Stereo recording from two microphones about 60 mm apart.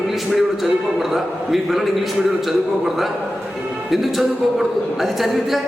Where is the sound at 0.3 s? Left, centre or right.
Centre.